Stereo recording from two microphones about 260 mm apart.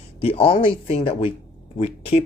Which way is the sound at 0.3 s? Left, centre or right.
Left.